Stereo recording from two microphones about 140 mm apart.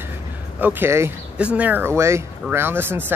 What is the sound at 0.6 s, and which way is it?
Speech, 15° right (ahead or behind).